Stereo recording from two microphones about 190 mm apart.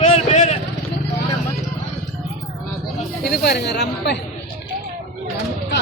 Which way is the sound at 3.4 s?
60° left (ahead or behind).